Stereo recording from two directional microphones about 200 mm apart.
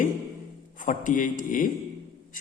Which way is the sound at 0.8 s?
40° left (ahead or behind).